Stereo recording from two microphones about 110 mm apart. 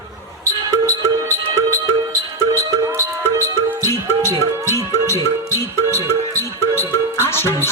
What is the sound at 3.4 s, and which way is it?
Music, 20° left (ahead or behind).